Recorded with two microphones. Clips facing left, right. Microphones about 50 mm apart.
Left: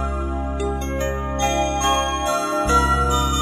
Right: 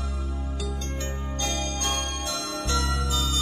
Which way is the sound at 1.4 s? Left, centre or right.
Left.